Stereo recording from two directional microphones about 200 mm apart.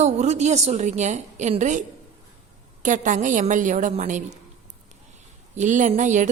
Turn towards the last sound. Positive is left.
turn(degrees=-40)  # may be behind; listen again after turning